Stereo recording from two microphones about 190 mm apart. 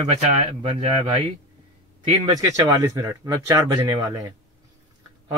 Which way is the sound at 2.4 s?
15° right (ahead or behind).